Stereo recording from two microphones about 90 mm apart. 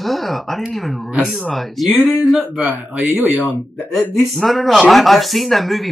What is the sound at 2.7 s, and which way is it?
Speech, 20° right (ahead or behind).